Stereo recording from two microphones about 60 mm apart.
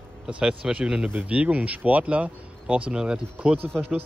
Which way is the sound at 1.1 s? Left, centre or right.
Right.